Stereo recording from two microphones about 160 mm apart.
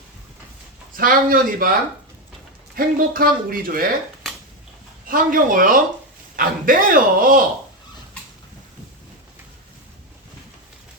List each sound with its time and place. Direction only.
0.9 s speech: 60° right (ahead or behind)
2.7 s speech: 65° right (ahead or behind)
5.0 s speech: 60° right (ahead or behind)